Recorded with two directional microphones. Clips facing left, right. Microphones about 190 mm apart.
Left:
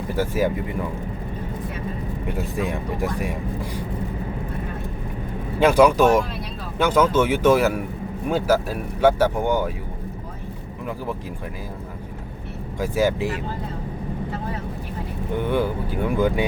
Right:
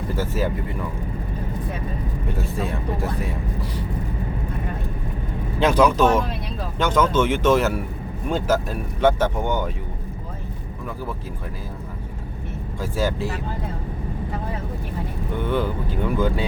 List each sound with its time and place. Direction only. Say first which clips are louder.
0.2 s speech: left 4 dB; 10° left (ahead or behind)
2.3 s speech: left 2 dB; 15° left (ahead or behind)
5.5 s speech: left 2 dB; 10° left (ahead or behind)
12.8 s speech: left 3 dB; 15° left (ahead or behind)
15.4 s speech: left 1 dB; 10° left (ahead or behind)